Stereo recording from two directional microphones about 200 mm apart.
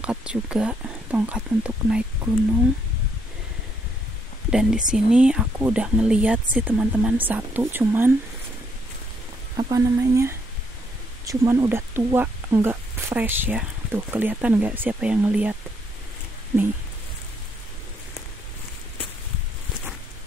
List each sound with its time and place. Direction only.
0.0 s speech: 5° right (ahead or behind)
4.5 s speech: 5° right (ahead or behind)
9.6 s speech: 15° right (ahead or behind)